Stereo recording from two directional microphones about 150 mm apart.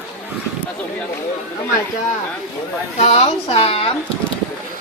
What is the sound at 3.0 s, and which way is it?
Speech, 45° left (ahead or behind).